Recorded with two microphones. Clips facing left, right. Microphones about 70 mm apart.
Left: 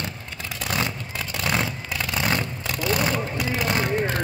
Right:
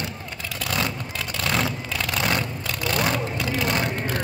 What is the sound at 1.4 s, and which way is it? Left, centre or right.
Vehicle, centre.